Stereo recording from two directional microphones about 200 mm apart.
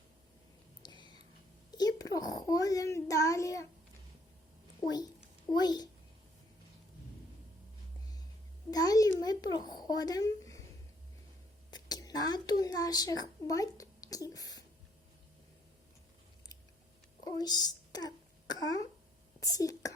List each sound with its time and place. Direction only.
0.8 s a sound: 20° left (ahead or behind)
1.7 s a child's voice: 20° left (ahead or behind)
4.8 s a woman's voice: 20° left (ahead or behind)
8.7 s a child's voice: 20° left (ahead or behind)
11.7 s a child's voice: 20° left (ahead or behind)
17.2 s a sound: 20° left (ahead or behind)
19.4 s speech: 15° left (ahead or behind)